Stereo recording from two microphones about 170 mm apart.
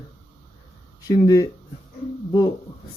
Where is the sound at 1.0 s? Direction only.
20° left (ahead or behind).